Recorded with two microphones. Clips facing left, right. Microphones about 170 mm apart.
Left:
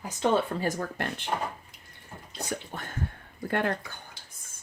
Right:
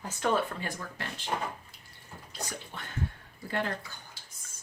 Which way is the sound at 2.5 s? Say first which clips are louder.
Left 6 dB; 45° left (ahead or behind).